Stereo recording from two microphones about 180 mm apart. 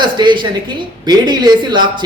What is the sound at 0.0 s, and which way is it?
Speech, 25° right (ahead or behind).